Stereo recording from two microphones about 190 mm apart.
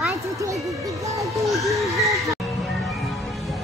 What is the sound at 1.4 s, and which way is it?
Music, centre (ahead or behind).